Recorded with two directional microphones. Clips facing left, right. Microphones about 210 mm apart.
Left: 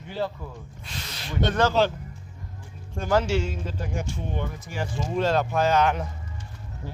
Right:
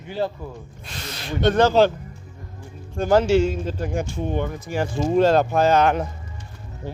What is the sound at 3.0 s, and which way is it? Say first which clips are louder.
Speech: right 7 dB; 30° right (ahead or behind).